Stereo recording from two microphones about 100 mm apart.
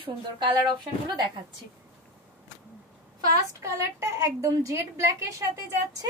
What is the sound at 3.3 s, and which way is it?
A woman's voice, 30° right (ahead or behind).